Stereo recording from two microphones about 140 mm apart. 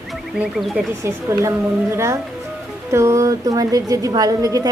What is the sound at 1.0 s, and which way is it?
A woman's voice, 20° right (ahead or behind).